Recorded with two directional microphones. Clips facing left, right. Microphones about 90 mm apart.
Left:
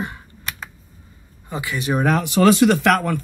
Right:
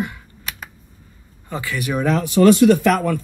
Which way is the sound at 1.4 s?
20° left (ahead or behind).